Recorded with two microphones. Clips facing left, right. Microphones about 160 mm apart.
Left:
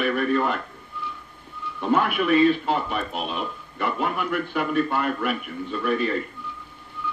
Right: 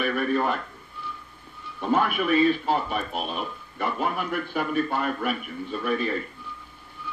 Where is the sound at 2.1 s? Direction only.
60° left (ahead or behind).